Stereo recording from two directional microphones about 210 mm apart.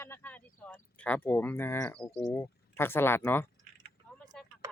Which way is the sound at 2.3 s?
10° left (ahead or behind).